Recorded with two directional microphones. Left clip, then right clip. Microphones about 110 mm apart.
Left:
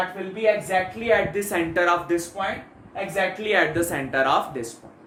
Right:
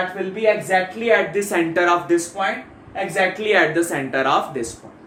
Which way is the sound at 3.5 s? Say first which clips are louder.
Right 3 dB; 15° left (ahead or behind).